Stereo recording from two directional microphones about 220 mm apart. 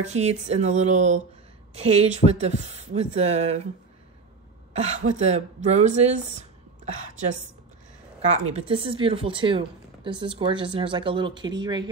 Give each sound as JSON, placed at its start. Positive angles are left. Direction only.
{"t": 0.0, "sound": "a woman's voice", "side_deg": -30}
{"t": 4.7, "sound": "speech", "side_deg": -30}
{"t": 8.3, "sound": "a woman's voice", "side_deg": -30}